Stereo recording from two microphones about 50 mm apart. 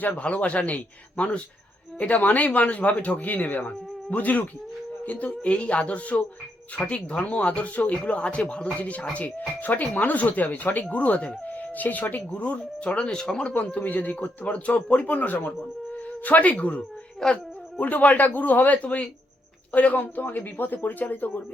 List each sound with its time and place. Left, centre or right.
0.1 s a man's voice: left
13.5 s a man's voice: left
17.2 s speech: centre
17.7 s a man's voice: left